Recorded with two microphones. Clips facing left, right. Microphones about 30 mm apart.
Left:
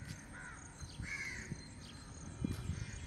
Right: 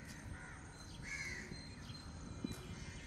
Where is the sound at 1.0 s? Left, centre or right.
Left.